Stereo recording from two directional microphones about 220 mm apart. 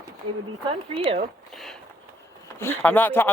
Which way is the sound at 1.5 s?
Centre (ahead or behind).